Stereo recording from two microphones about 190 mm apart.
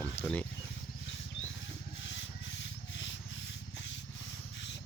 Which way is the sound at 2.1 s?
70° left (ahead or behind).